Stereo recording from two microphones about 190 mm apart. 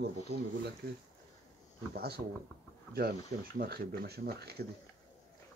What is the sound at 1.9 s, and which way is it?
Speech, 55° right (ahead or behind).